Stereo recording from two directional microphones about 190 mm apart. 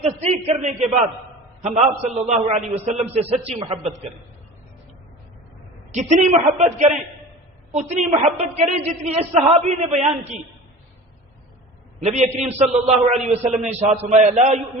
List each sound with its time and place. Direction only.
0.0 s a woman's voice: 35° right (ahead or behind)
5.9 s a woman's voice: 40° right (ahead or behind)
11.9 s a woman's voice: 40° right (ahead or behind)